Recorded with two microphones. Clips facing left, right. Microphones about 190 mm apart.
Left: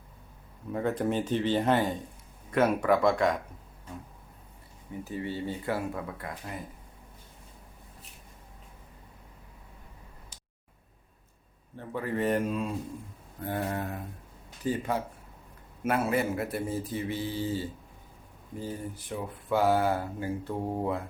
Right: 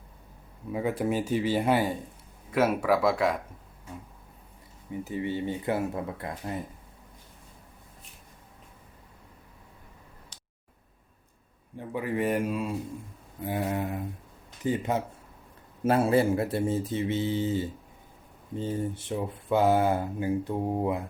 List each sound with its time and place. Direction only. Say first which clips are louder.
0.7 s speech: right 1 dB; 10° right (ahead or behind)
4.9 s speech: right 4 dB; 20° right (ahead or behind)
11.8 s speech: right 1 dB; 10° right (ahead or behind)